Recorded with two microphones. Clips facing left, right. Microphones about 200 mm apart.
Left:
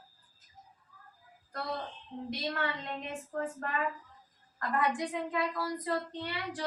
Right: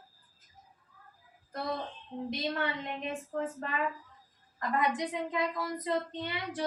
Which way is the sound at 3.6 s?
20° right (ahead or behind).